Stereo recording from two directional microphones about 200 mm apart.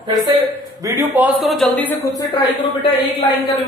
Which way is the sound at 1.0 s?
10° right (ahead or behind).